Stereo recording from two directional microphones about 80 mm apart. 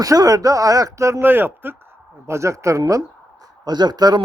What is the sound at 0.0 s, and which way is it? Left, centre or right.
Speech, right.